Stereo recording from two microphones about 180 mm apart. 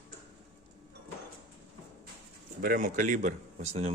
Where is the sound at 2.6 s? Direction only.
50° right (ahead or behind); by 3.9 s 35° right (ahead or behind).